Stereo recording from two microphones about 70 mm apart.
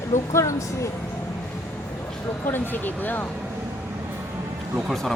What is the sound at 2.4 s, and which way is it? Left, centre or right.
Speech, left.